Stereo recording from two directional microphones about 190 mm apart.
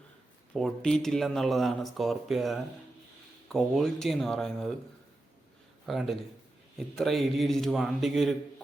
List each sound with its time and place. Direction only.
0.5 s speech: centre (ahead or behind)
5.8 s a man's voice: centre (ahead or behind)